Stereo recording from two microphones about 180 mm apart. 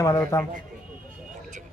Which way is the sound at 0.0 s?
15° left (ahead or behind).